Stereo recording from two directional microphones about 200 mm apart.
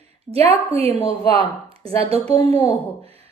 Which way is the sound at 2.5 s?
10° left (ahead or behind).